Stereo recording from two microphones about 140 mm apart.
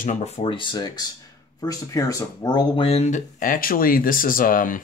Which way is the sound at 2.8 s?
50° left (ahead or behind).